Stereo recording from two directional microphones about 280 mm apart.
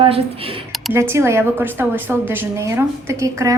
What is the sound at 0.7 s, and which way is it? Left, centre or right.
A woman's voice, centre.